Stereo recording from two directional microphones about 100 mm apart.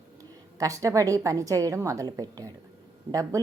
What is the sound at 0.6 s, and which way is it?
A woman's voice, 35° right (ahead or behind).